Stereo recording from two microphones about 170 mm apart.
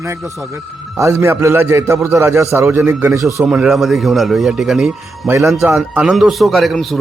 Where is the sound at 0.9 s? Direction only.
15° right (ahead or behind).